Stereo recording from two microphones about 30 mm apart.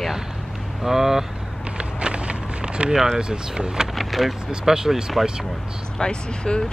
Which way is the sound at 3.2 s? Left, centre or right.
Right.